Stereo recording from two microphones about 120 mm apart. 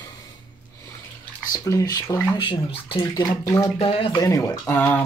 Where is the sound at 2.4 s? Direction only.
45° left (ahead or behind).